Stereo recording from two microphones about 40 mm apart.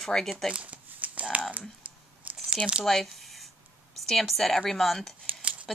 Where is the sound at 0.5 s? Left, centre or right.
Right.